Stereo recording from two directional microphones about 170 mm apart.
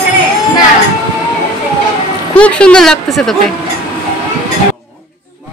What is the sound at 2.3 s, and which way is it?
A man's voice, 5° left (ahead or behind).